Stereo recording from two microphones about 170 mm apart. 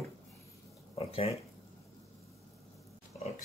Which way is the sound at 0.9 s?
35° left (ahead or behind).